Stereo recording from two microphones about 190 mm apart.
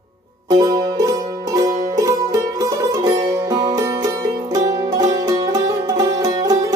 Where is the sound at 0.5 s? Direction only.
20° right (ahead or behind).